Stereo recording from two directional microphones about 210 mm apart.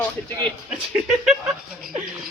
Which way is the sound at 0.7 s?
Centre (ahead or behind).